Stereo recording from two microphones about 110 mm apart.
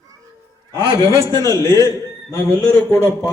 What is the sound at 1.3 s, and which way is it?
A man's voice, 30° left (ahead or behind).